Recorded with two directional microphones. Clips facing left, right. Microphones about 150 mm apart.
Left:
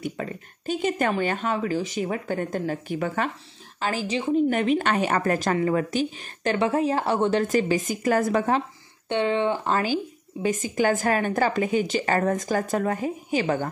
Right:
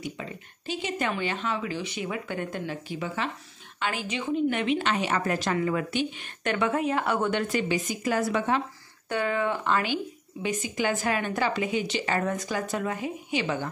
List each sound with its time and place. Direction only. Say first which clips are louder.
0.0 s a woman's voice: left 5 dB; 50° left (ahead or behind)
3.8 s a woman's voice: left 4 dB; 35° left (ahead or behind)
9.1 s speech: left 4 dB; 25° left (ahead or behind)
9.7 s a woman's voice: left 2 dB; 40° left (ahead or behind)